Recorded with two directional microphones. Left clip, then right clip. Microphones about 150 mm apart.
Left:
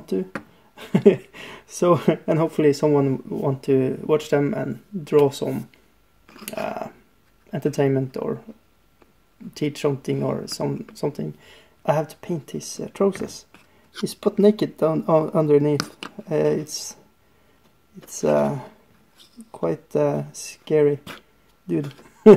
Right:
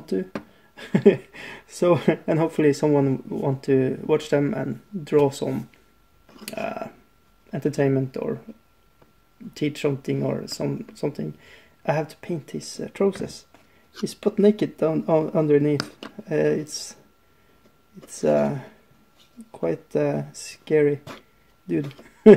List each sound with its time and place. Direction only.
0.0 s speech: 10° left (ahead or behind)
0.7 s a sound: 10° left (ahead or behind)
1.8 s speech: 10° left (ahead or behind)
6.6 s speech: 10° left (ahead or behind)
9.5 s speech: 10° left (ahead or behind)
14.2 s speech: 15° left (ahead or behind)
18.1 s speech: 20° left (ahead or behind)
19.5 s speech: 15° left (ahead or behind)